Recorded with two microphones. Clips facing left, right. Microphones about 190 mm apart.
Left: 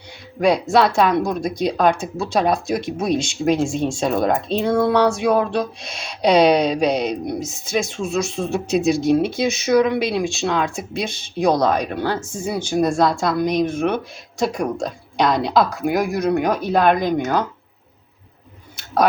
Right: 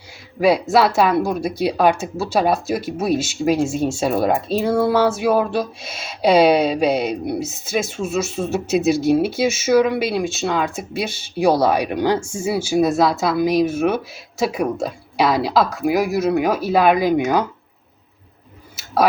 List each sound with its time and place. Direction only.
0.3 s speech: 5° right (ahead or behind)